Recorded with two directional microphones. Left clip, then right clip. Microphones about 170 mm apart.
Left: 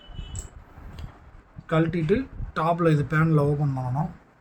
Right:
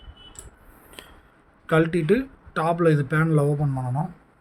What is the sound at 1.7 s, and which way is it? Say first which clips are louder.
Speech: right 3 dB; 30° right (ahead or behind).